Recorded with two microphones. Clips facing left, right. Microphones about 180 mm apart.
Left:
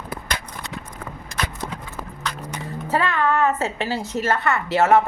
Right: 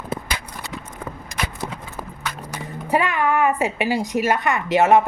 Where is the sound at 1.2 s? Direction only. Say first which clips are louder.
Left 1 dB; 15° right (ahead or behind).